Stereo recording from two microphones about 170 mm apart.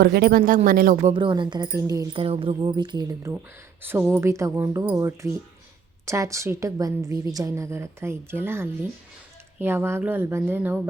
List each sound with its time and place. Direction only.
0.0 s speech: 65° right (ahead or behind)
1.1 s speech: 30° right (ahead or behind)
2.1 s a woman's voice: 35° right (ahead or behind); by 10.8 s 10° right (ahead or behind)